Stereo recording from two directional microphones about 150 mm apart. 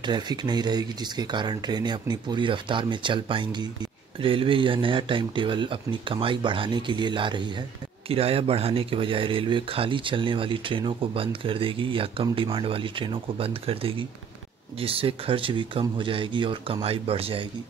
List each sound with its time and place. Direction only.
0.0 s speech: 30° right (ahead or behind)